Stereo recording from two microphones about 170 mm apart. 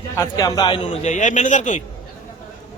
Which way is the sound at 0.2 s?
20° left (ahead or behind).